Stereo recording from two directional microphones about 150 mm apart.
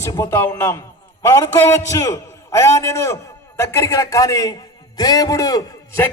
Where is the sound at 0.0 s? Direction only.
20° left (ahead or behind).